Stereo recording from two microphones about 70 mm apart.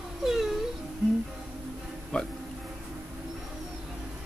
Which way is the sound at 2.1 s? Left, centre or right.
Centre.